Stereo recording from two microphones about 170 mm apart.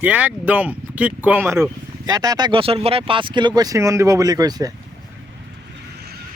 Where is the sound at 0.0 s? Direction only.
10° right (ahead or behind).